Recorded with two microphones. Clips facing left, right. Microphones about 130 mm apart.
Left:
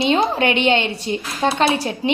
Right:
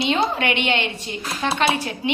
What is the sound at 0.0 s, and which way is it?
A woman's voice, 30° left (ahead or behind).